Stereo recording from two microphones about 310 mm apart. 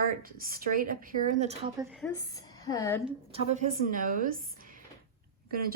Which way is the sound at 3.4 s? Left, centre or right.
Right.